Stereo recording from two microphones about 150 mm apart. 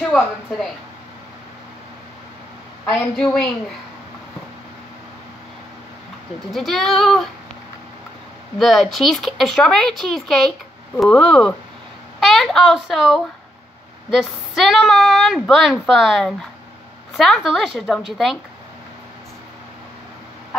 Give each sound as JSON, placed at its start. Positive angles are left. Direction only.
{"t": 0.0, "sound": "a woman's voice", "side_deg": 0}
{"t": 6.5, "sound": "a woman's voice", "side_deg": 0}
{"t": 8.5, "sound": "a woman's voice", "side_deg": 0}